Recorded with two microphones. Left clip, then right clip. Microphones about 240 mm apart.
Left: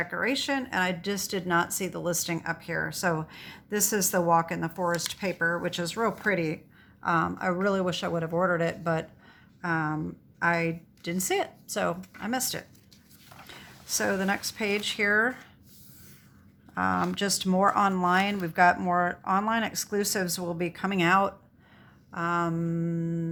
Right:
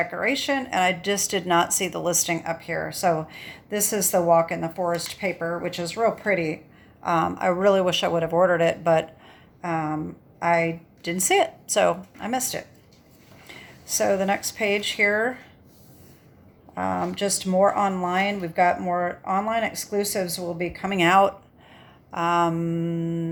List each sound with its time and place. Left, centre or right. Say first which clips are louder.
0.0 s a woman's voice: right 4 dB; centre
13.5 s a sound: right 3 dB; centre
14.3 s speech: right 5 dB; centre
16.7 s speech: right 1 dB; centre